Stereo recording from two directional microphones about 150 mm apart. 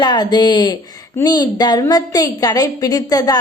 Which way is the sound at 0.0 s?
30° left (ahead or behind).